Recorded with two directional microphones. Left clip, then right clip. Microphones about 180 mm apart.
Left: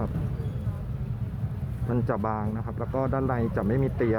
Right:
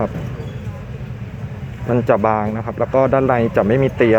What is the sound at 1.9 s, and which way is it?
Speech, 25° right (ahead or behind).